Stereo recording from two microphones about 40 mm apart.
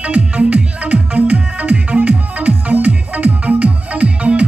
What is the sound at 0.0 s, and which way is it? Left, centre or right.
Music, right.